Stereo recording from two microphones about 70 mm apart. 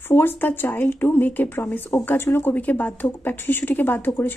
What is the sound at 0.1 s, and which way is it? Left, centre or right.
Speech, left.